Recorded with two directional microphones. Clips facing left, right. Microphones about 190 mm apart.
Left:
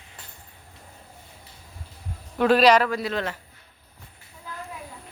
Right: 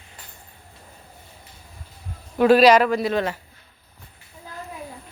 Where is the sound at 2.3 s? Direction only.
10° right (ahead or behind).